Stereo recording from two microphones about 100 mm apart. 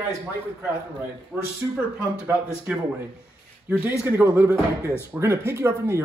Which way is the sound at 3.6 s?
15° right (ahead or behind).